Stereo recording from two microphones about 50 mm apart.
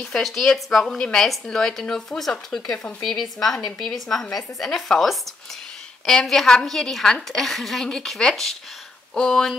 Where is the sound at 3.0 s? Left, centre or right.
Centre.